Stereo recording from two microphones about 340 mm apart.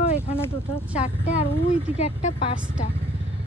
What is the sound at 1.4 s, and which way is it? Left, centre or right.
Speech, centre.